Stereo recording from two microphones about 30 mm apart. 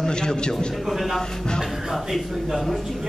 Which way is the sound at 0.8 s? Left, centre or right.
Centre.